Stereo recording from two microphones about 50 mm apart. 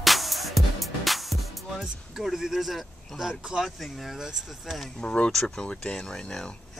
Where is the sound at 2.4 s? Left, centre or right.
Centre.